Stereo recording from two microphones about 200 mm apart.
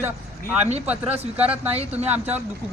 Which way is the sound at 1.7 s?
30° right (ahead or behind).